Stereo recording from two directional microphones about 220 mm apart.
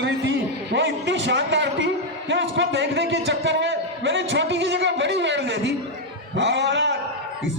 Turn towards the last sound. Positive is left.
turn(degrees=-55)  # may be behind; listen again after turning